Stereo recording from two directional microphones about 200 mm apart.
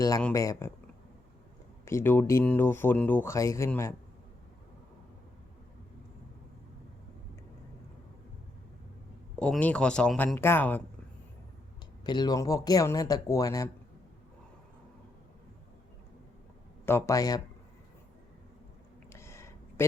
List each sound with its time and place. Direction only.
0.2 s speech: 10° left (ahead or behind)
1.8 s speech: 15° left (ahead or behind)
9.4 s speech: 5° left (ahead or behind)
12.0 s speech: 20° left (ahead or behind)
16.8 s speech: 15° left (ahead or behind)
19.1 s a sound: 15° left (ahead or behind)